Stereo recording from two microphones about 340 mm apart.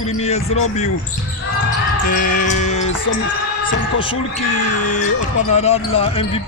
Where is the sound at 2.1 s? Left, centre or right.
Left.